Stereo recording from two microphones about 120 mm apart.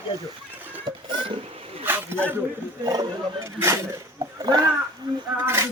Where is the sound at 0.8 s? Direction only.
45° right (ahead or behind).